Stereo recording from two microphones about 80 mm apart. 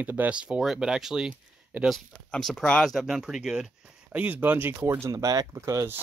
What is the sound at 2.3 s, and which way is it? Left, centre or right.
Speech, centre.